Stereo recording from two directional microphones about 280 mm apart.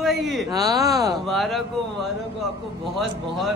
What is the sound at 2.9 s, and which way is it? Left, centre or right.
Speech, centre.